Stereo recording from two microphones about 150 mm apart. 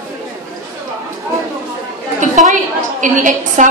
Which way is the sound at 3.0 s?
60° right (ahead or behind).